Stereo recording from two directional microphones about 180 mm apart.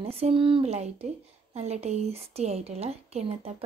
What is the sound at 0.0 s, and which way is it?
Speech, 30° right (ahead or behind).